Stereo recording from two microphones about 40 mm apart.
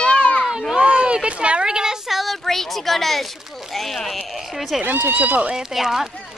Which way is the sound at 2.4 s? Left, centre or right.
Centre.